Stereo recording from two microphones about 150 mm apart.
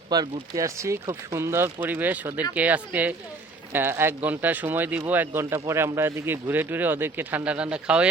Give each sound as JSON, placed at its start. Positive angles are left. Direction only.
{"t": 0.1, "sound": "speech", "side_deg": -25}